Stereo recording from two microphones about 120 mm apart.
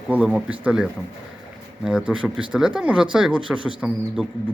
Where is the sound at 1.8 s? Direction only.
5° right (ahead or behind).